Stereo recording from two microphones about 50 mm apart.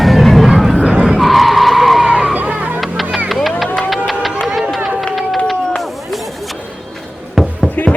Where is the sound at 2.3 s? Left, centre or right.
Right.